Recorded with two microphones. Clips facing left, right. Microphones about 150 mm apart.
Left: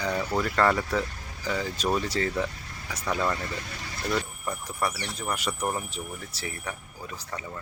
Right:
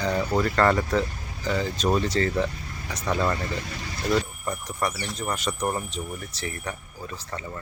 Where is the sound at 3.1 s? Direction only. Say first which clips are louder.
Right 3 dB; centre (ahead or behind).